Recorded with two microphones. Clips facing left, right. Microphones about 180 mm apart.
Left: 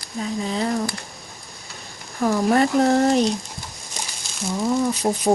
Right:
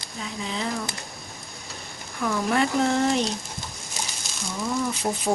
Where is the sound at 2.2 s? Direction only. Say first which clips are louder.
Left 6 dB; 40° left (ahead or behind).